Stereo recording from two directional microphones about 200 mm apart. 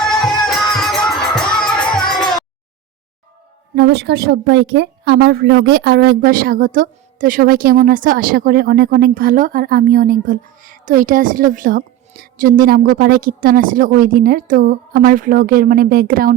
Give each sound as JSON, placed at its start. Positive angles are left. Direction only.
{"t": 0.0, "sound": "music", "side_deg": 0}
{"t": 3.8, "sound": "a woman's voice", "side_deg": -55}